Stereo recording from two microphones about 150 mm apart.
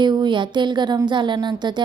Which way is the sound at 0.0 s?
30° right (ahead or behind).